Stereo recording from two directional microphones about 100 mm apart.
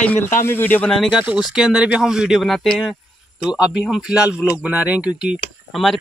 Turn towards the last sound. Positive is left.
turn(degrees=0)  # may be behind; listen again after turning